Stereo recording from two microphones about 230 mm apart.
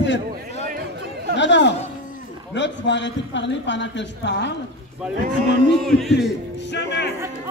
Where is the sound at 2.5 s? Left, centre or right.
Left.